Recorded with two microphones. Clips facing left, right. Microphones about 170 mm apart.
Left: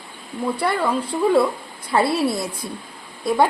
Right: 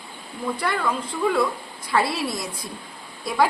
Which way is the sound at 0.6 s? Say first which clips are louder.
Left 4 dB; 30° left (ahead or behind).